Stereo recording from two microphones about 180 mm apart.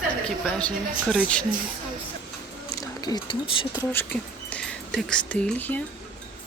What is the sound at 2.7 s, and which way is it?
Speech, 20° left (ahead or behind).